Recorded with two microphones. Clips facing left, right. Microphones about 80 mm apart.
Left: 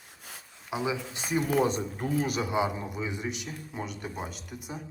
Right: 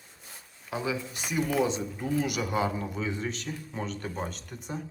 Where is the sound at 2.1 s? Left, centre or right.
Left.